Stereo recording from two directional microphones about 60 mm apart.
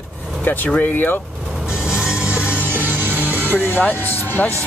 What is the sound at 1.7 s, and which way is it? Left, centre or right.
Music, centre.